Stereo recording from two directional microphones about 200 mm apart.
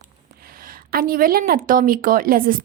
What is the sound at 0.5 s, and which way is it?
Speech, 45° right (ahead or behind).